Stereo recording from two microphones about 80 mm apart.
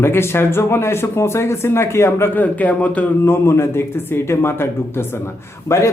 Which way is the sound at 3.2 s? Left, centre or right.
Left.